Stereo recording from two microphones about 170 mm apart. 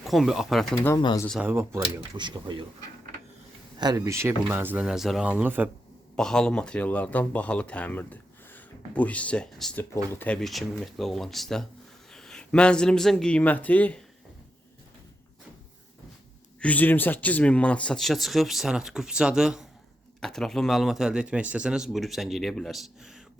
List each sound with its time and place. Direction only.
0.0 s speech: centre (ahead or behind)
0.9 s speech: 25° left (ahead or behind)
1.5 s speech: 15° right (ahead or behind)
2.0 s speech: 25° right (ahead or behind)
3.8 s speech: 25° right (ahead or behind)
6.1 s speech: 5° left (ahead or behind)
16.6 s speech: 10° left (ahead or behind)